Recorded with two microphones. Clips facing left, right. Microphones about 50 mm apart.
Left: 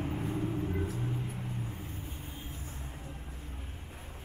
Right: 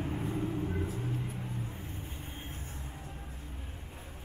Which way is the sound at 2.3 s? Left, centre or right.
Right.